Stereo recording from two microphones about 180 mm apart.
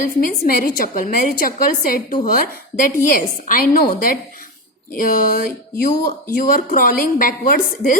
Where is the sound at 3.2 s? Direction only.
50° left (ahead or behind).